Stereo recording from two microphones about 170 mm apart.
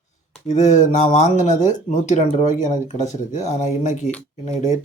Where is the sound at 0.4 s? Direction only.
45° left (ahead or behind).